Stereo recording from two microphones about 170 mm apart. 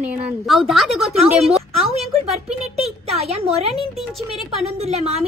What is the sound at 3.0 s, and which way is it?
Speech, 35° right (ahead or behind).